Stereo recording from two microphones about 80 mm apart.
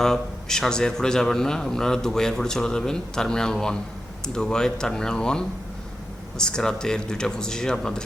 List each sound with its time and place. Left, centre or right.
0.0 s a man's voice: centre